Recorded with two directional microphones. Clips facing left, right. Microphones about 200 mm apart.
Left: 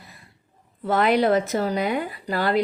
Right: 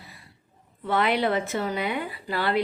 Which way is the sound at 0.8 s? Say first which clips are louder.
Left 4 dB; 45° left (ahead or behind).